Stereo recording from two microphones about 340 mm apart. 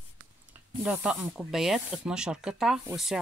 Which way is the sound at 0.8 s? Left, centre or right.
Centre.